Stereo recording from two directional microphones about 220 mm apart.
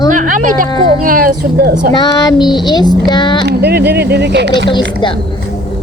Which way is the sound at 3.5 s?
45° right (ahead or behind).